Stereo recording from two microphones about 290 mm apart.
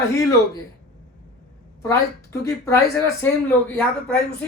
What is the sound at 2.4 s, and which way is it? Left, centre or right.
Speech, centre.